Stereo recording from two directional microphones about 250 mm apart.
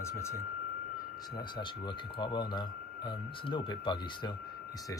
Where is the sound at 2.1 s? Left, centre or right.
Centre.